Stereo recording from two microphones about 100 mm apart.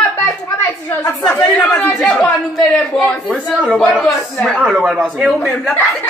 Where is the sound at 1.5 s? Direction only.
10° left (ahead or behind).